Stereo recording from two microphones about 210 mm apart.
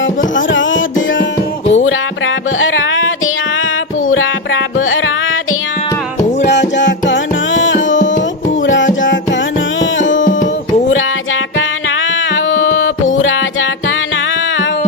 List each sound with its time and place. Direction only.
0.3 s music: 65° left (ahead or behind)
4.1 s music: 70° left (ahead or behind)
6.4 s music: 55° left (ahead or behind)
7.9 s tabla: 35° left (ahead or behind)
8.6 s music: 65° left (ahead or behind)
10.2 s tabla: 40° left (ahead or behind)
12.3 s music: 65° left (ahead or behind)